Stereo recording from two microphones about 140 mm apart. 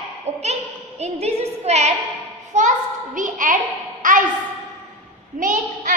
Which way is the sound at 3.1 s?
70° right (ahead or behind).